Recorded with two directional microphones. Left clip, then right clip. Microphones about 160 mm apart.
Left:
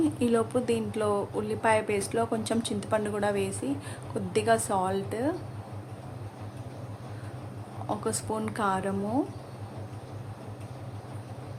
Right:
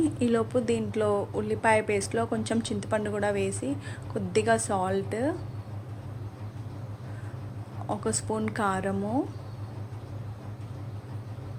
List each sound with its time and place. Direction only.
0.2 s speech: 10° right (ahead or behind)
7.9 s speech: 10° right (ahead or behind)